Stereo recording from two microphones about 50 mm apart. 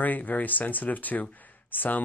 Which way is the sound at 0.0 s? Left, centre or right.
Left.